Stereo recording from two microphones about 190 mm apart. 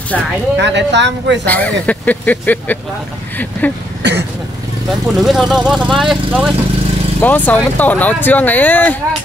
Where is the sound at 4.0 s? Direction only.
65° right (ahead or behind).